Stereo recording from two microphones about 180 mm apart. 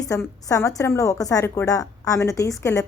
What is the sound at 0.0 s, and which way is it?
A woman's voice, 20° left (ahead or behind).